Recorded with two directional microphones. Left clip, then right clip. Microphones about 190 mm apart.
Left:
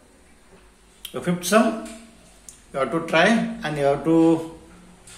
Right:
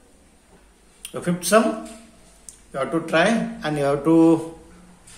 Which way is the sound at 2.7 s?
Centre (ahead or behind).